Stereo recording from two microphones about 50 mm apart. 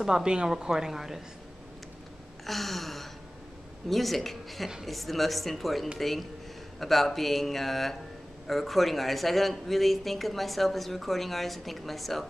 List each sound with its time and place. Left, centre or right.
0.0 s speech: centre
2.4 s a sound: centre
3.9 s speech: centre